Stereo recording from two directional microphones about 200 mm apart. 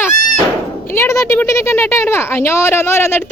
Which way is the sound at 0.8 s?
10° left (ahead or behind).